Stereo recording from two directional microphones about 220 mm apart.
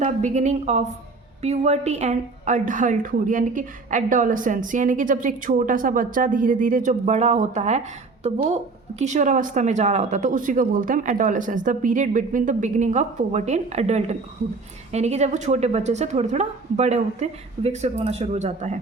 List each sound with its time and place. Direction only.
0.0 s a woman's voice: 35° right (ahead or behind)